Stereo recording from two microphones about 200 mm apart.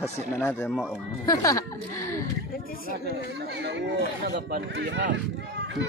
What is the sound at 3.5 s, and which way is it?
Speech, 60° right (ahead or behind).